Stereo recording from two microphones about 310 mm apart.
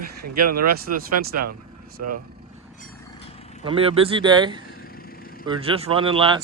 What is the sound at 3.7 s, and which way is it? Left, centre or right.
Speech, centre.